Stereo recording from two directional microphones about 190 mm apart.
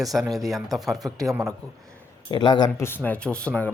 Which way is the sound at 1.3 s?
15° right (ahead or behind).